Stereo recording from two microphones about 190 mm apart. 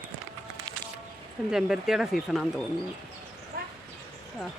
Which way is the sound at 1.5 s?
5° right (ahead or behind).